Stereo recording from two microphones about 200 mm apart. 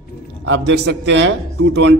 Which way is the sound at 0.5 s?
60° right (ahead or behind).